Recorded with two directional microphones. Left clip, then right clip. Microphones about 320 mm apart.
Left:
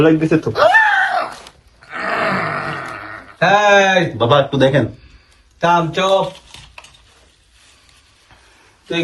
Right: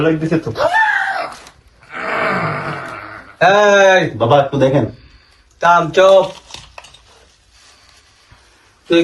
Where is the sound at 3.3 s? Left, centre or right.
Right.